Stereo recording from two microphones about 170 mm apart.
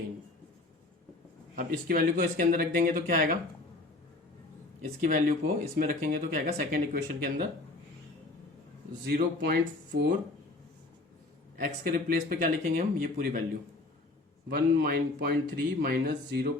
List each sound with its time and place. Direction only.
1.5 s speech: 55° right (ahead or behind)
4.8 s speech: 50° right (ahead or behind)
9.0 s speech: 65° right (ahead or behind)
11.6 s speech: 55° right (ahead or behind)
14.5 s speech: 65° right (ahead or behind)